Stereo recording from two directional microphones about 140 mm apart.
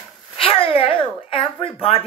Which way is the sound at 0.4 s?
40° left (ahead or behind).